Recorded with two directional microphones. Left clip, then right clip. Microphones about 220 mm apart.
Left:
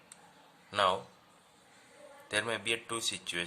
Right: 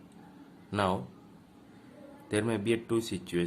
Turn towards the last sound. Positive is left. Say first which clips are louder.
# right 3 dB
turn(degrees=30)  # may be behind; listen again after turning